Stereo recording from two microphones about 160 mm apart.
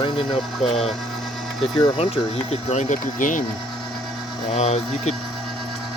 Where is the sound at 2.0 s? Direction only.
40° left (ahead or behind).